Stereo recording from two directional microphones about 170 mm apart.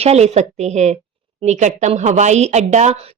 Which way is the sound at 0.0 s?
40° right (ahead or behind).